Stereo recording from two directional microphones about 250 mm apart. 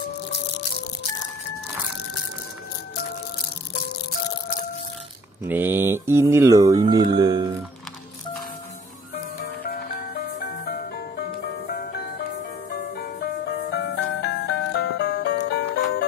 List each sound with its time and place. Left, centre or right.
5.4 s speech: centre
9.6 s music: left
12.9 s music: left